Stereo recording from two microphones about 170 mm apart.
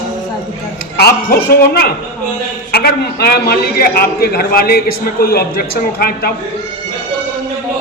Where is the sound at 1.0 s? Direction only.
65° left (ahead or behind).